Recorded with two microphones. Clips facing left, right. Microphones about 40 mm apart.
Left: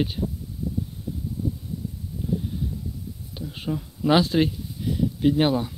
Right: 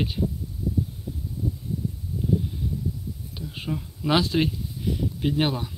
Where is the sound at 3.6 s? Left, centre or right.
Centre.